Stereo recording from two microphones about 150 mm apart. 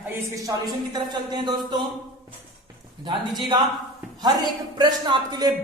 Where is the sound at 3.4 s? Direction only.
30° right (ahead or behind).